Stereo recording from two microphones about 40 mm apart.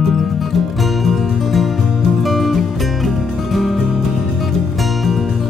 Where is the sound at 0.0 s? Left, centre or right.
Centre.